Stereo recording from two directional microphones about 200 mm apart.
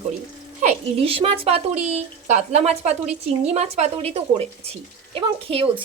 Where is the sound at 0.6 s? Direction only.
30° right (ahead or behind).